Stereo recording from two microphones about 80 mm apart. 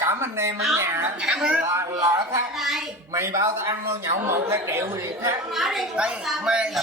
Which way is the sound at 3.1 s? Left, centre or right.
Right.